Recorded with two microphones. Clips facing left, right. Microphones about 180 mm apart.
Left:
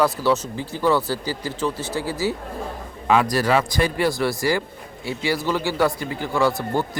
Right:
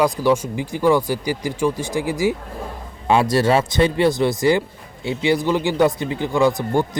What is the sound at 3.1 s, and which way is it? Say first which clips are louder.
Speech: right 3 dB; 30° right (ahead or behind).